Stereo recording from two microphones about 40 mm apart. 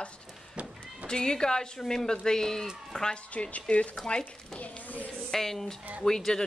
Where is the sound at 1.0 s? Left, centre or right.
Centre.